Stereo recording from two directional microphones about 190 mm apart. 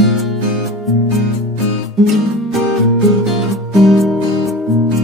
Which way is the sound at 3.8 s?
Centre (ahead or behind).